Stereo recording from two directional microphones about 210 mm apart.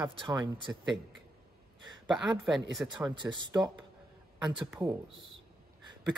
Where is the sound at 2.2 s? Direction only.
Centre (ahead or behind).